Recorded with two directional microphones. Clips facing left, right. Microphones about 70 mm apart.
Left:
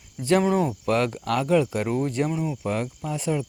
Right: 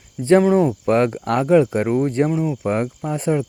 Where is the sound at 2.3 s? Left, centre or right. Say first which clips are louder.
Right 6 dB; centre.